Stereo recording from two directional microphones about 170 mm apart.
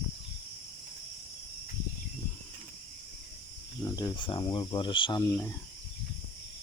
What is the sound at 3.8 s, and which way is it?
Speech, 20° left (ahead or behind).